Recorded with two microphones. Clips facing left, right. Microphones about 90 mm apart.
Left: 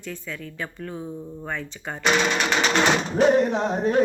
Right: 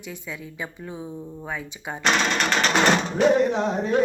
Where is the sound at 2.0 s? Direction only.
10° left (ahead or behind).